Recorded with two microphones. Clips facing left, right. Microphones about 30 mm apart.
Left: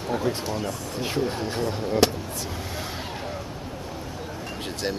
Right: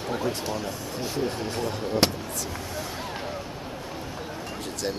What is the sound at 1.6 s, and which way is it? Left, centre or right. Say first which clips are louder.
Speech: left 3 dB; centre.